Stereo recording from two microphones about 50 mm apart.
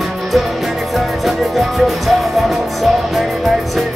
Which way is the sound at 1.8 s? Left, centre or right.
Centre.